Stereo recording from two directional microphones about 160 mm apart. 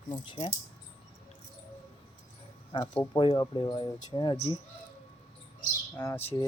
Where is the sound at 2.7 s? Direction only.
30° left (ahead or behind).